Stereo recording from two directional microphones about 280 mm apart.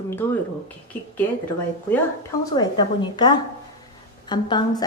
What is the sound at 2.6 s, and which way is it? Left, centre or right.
A woman's voice, centre.